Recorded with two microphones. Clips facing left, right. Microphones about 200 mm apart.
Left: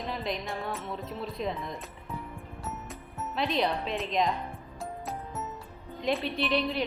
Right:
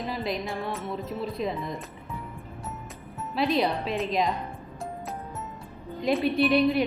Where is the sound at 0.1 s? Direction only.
5° right (ahead or behind).